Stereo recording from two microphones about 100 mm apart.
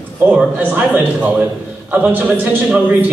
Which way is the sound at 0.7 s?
15° right (ahead or behind).